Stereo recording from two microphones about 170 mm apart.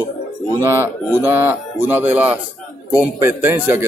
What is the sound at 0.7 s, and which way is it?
A man's voice, 15° right (ahead or behind).